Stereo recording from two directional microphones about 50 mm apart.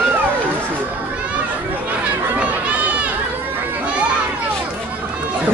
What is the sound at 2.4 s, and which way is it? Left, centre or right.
Run, right.